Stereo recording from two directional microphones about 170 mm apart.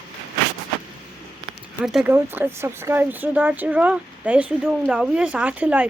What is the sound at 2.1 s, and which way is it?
Speech, 15° right (ahead or behind).